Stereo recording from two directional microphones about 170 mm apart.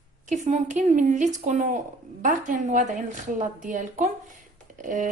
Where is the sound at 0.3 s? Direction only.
45° right (ahead or behind).